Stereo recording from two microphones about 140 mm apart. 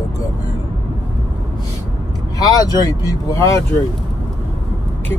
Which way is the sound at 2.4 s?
25° left (ahead or behind).